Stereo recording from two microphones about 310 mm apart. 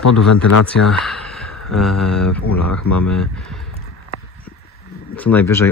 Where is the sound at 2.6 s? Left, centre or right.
Left.